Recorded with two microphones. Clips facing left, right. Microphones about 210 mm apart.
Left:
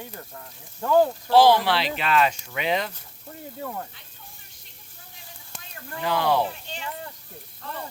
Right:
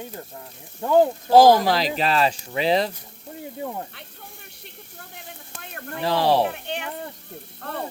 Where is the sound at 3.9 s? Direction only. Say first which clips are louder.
Right 7 dB; 65° right (ahead or behind).